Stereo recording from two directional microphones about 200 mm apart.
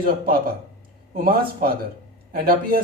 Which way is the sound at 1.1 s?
50° right (ahead or behind).